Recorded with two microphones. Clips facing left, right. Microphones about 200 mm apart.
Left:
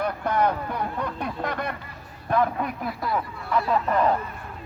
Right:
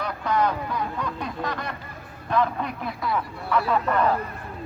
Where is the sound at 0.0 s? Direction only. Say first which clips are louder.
Left 1 dB; 55° left (ahead or behind).